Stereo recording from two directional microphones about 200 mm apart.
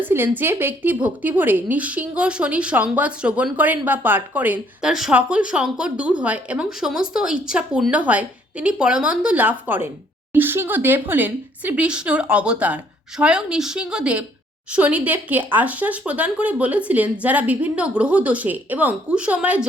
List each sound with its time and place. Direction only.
0.0 s a woman's voice: 10° right (ahead or behind)